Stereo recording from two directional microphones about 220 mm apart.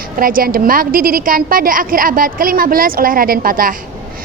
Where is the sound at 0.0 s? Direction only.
40° right (ahead or behind).